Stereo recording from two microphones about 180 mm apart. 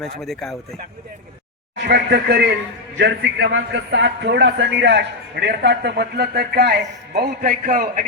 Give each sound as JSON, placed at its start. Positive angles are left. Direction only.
{"t": 0.0, "sound": "speech", "side_deg": 0}
{"t": 1.7, "sound": "a man's voice", "side_deg": -70}